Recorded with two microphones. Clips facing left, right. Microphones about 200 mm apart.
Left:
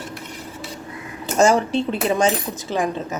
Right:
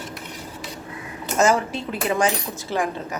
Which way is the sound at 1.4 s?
30° left (ahead or behind).